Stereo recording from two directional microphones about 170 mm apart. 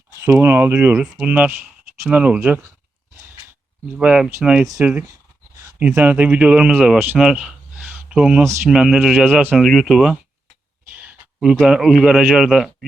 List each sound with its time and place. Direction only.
0.2 s speech: 15° right (ahead or behind)
3.9 s a man's voice: 5° right (ahead or behind)
4.6 s a man's voice: 20° right (ahead or behind); by 12.7 s centre (ahead or behind)